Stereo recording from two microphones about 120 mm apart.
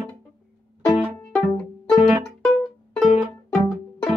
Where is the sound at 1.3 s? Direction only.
5° left (ahead or behind).